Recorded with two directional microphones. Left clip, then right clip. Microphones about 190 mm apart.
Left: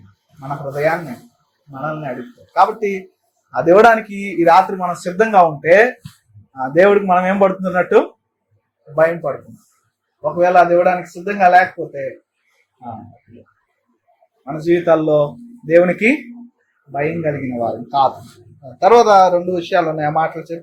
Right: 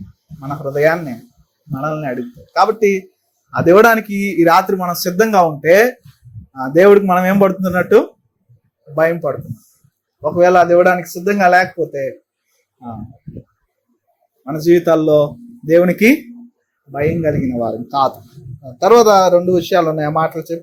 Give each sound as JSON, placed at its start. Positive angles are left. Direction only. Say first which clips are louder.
{"t": 0.3, "sound": "speech", "louder": "right 4 dB", "side_deg": -50}
{"t": 10.2, "sound": "speech", "louder": "right 1 dB", "side_deg": -50}
{"t": 14.4, "sound": "speech", "louder": "right 3 dB", "side_deg": -60}
{"t": 15.7, "sound": "speech", "louder": "right 1 dB", "side_deg": -60}
{"t": 18.8, "sound": "speech", "louder": "even", "side_deg": -45}